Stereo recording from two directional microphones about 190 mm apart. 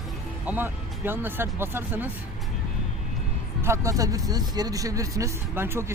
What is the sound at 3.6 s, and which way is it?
Speech, 15° right (ahead or behind).